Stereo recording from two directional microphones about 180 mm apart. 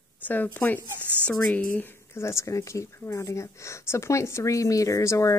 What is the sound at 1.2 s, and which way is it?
Speech, 10° left (ahead or behind).